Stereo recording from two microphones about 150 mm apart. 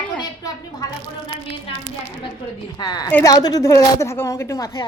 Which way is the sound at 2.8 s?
25° left (ahead or behind).